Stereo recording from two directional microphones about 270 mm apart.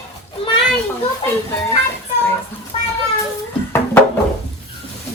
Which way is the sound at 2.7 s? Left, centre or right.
Left.